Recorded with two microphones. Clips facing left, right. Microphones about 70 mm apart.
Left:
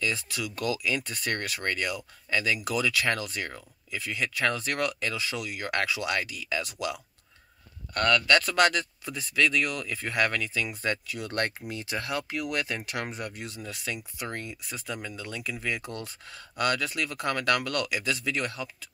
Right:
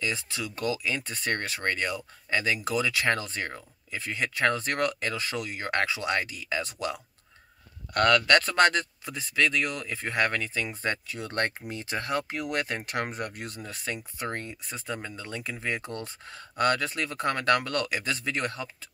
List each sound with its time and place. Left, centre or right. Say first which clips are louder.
0.0 s speech: left 1 dB; right
7.9 s speech: right 3 dB; right
8.3 s speech: right 1 dB; right